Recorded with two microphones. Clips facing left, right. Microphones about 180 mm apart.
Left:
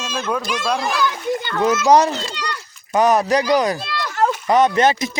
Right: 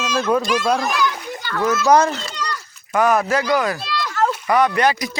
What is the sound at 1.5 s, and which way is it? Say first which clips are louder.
Speech: left 1 dB; 20° left (ahead or behind).